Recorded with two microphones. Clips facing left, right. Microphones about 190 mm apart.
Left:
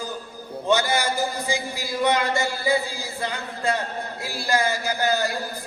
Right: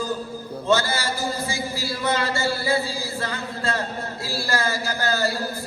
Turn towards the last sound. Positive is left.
turn(degrees=15)  # may be behind; listen again after turning